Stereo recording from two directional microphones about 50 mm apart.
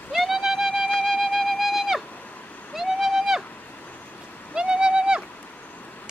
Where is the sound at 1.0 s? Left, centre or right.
Centre.